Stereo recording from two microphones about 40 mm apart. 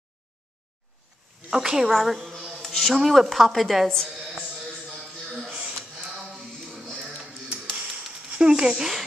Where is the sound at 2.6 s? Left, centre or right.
Centre.